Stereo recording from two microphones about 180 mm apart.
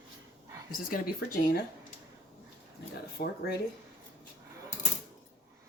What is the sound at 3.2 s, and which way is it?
Speech, 55° left (ahead or behind).